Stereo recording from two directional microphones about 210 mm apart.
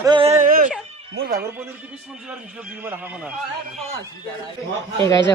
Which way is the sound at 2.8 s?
10° right (ahead or behind).